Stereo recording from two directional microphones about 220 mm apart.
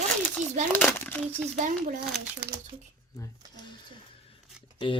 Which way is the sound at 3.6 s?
25° left (ahead or behind).